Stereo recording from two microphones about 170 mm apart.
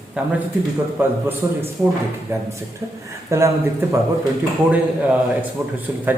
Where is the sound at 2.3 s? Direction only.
15° right (ahead or behind).